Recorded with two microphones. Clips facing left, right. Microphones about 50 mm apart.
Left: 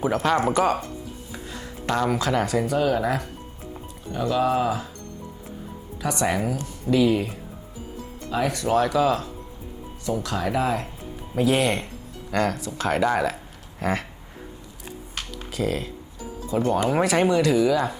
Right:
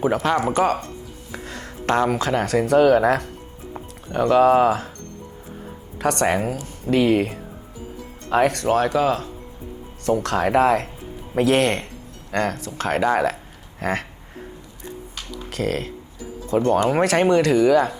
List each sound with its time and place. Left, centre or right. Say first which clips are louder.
0.0 s speech: right 2 dB; right
1.3 s music: right 6 dB; right
2.0 s speech: right 2 dB; right
2.5 s speech: right 7 dB; right
6.0 s speech: right 4 dB; right
8.6 s speech: right 2 dB; right
10.1 s speech: right 6 dB; right
12.3 s speech: right 1 dB; right
15.5 s speech: right 2 dB; right